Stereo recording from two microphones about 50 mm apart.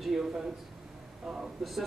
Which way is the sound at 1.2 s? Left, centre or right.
Centre.